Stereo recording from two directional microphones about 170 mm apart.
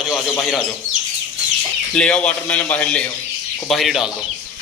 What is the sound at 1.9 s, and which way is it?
A man's voice, 5° left (ahead or behind).